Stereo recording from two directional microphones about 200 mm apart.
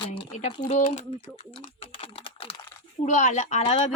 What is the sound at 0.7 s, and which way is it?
Speech, 35° left (ahead or behind).